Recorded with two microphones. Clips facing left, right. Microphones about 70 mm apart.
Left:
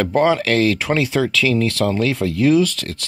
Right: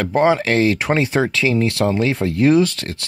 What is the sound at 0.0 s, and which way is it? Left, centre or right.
Speech, right.